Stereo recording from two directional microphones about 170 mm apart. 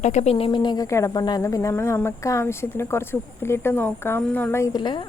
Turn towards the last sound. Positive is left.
turn(degrees=25)  # may be behind; listen again after turning